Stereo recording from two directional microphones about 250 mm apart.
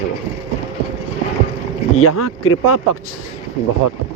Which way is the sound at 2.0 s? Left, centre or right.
Left.